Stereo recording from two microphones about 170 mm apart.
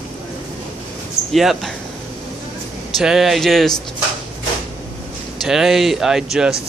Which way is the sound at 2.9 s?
Centre (ahead or behind).